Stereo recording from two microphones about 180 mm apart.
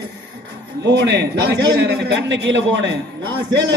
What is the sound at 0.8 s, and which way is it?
A man's voice, 75° right (ahead or behind).